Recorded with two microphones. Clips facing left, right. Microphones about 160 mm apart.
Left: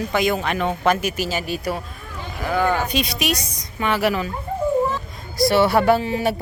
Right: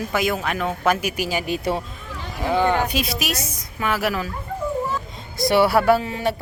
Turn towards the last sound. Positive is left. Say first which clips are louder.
# left 1 dB
turn(degrees=5)  # may be behind; listen again after turning